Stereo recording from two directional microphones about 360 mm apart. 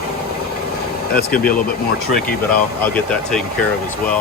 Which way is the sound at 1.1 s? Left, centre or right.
Left.